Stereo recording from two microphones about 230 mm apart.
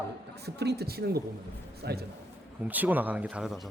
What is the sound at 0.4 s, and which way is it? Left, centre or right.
Speech, right.